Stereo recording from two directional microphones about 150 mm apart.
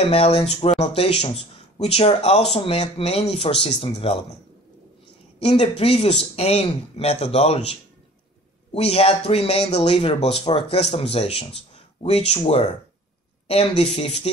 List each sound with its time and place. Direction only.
0.0 s speech: 40° left (ahead or behind)
5.4 s speech: 40° left (ahead or behind)
8.7 s speech: 40° left (ahead or behind)